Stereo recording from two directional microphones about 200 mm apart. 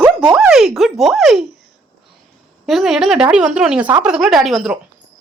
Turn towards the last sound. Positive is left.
turn(degrees=0)  # may be behind; listen again after turning